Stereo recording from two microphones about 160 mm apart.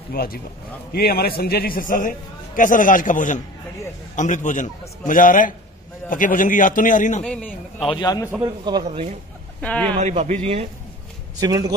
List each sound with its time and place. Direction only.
0.1 s a man's voice: 70° left (ahead or behind); by 7.2 s 50° left (ahead or behind)
7.2 s a man's voice: 5° left (ahead or behind)
7.8 s a man's voice: 30° left (ahead or behind)
8.4 s a man's voice: 25° right (ahead or behind)
8.8 s a man's voice: 45° right (ahead or behind)
9.6 s speech: 5° left (ahead or behind)
9.9 s a man's voice: 45° right (ahead or behind)
11.3 s a man's voice: 20° right (ahead or behind)